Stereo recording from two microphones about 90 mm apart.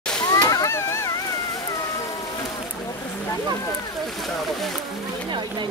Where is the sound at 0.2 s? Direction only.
45° left (ahead or behind); by 1.1 s 30° left (ahead or behind).